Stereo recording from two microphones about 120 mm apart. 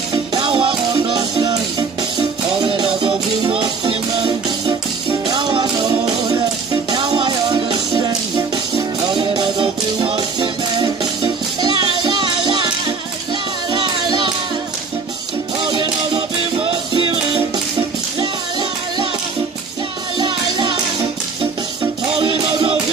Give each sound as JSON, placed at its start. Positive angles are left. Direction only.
{"t": 0.3, "sound": "music", "side_deg": -45}
{"t": 1.1, "sound": "music", "side_deg": -30}
{"t": 3.1, "sound": "music", "side_deg": -50}
{"t": 5.2, "sound": "music", "side_deg": -35}
{"t": 9.2, "sound": "music", "side_deg": -45}
{"t": 15.8, "sound": "music", "side_deg": -45}
{"t": 20.2, "sound": "music", "side_deg": -40}